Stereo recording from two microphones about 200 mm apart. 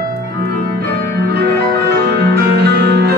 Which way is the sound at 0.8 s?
50° right (ahead or behind).